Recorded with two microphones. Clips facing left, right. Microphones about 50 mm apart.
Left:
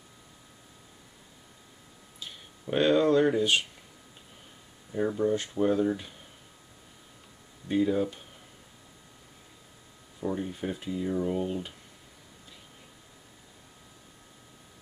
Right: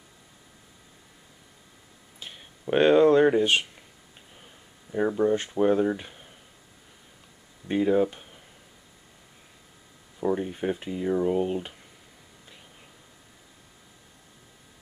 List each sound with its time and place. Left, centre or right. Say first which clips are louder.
2.1 s a sound: right 1 dB; right
4.9 s speech: right 3 dB; right
7.6 s speech: right 4 dB; right
10.2 s speech: right 5 dB; right